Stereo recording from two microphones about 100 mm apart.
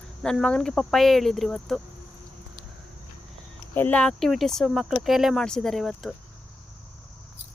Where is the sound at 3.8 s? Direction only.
20° left (ahead or behind).